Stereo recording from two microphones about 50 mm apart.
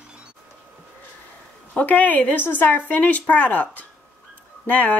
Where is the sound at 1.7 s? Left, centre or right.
Left.